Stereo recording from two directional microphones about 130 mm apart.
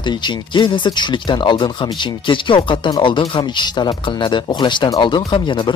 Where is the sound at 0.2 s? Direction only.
35° left (ahead or behind).